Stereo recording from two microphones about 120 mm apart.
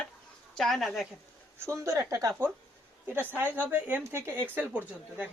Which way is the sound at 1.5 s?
20° right (ahead or behind).